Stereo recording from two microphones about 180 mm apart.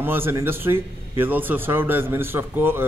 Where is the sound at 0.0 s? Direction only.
10° right (ahead or behind).